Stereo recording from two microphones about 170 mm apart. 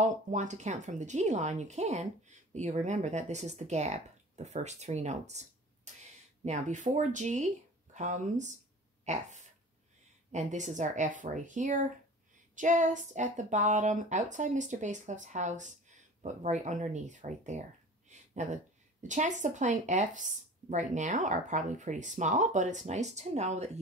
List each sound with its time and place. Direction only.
0.0 s speech: 45° right (ahead or behind)